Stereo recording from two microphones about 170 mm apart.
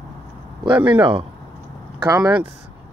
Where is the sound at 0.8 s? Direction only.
30° right (ahead or behind).